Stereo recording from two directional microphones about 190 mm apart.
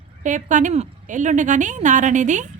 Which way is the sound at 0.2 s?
40° right (ahead or behind).